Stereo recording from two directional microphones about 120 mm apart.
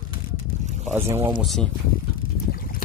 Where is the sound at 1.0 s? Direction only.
60° right (ahead or behind).